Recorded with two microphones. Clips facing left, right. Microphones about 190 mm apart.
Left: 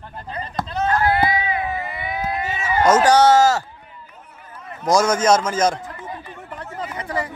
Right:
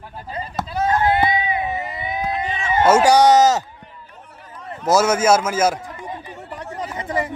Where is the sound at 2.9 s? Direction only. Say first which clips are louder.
Right 1 dB; 10° right (ahead or behind).